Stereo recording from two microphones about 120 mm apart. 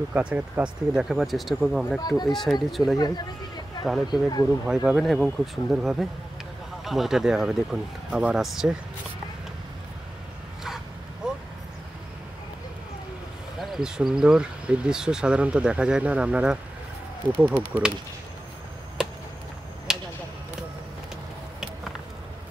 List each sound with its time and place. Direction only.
0.1 s speech: 10° right (ahead or behind)
2.0 s speech: 35° left (ahead or behind)
2.3 s speech: centre (ahead or behind)
4.1 s speech: 35° left (ahead or behind)
4.6 s speech: 5° right (ahead or behind)
11.2 s vehicle: 5° right (ahead or behind)
13.6 s speech: 5° right (ahead or behind)
19.9 s a sound: 5° right (ahead or behind)